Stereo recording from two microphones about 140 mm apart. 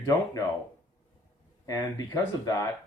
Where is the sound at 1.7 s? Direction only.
20° left (ahead or behind).